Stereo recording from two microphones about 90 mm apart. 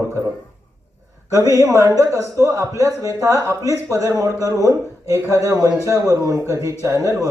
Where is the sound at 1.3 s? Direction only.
35° right (ahead or behind).